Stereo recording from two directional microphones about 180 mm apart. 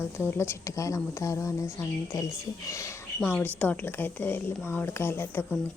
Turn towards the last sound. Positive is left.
turn(degrees=10)  # may be behind; listen again after turning